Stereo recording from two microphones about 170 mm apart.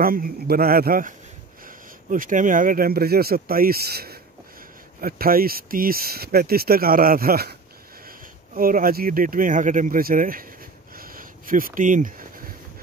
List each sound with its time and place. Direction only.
0.0 s speech: 60° right (ahead or behind)
8.5 s speech: 55° right (ahead or behind)
11.0 s a sound: 55° right (ahead or behind)